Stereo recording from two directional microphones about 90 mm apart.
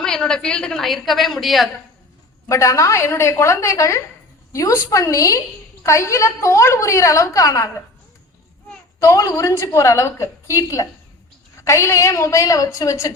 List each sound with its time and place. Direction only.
0.0 s a woman's voice: 5° left (ahead or behind)
2.5 s a woman's voice: 35° left (ahead or behind)
9.0 s a woman's voice: 35° left (ahead or behind)